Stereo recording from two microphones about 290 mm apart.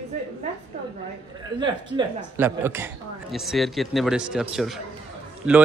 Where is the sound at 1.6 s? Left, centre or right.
Centre.